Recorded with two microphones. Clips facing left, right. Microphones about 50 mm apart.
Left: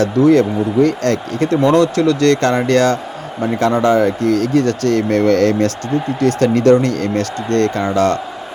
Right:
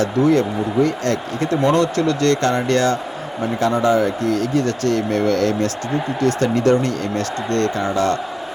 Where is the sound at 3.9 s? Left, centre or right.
Left.